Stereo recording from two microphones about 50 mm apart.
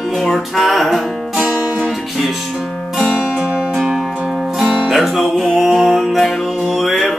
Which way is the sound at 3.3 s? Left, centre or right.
Right.